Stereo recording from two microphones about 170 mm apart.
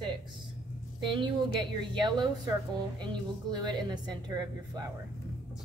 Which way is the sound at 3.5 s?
25° right (ahead or behind).